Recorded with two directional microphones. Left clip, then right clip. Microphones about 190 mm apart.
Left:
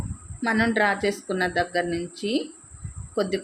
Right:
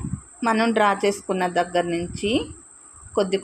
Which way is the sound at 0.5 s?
10° right (ahead or behind).